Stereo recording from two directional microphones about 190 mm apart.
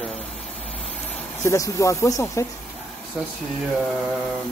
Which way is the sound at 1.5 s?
15° left (ahead or behind).